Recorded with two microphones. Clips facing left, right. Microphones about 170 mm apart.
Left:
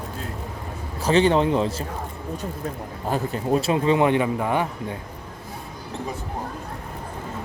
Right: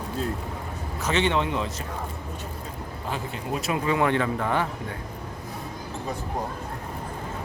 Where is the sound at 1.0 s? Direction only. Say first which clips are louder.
Left 6 dB; 35° left (ahead or behind).